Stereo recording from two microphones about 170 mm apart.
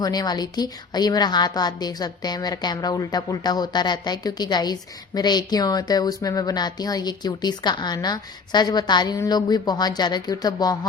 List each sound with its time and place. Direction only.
0.0 s a woman's voice: 25° left (ahead or behind)